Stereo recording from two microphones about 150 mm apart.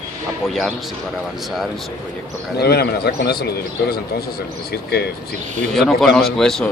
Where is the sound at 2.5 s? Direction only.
90° left.